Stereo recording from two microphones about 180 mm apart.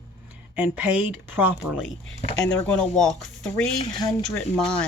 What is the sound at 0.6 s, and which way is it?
Speech, 5° right (ahead or behind).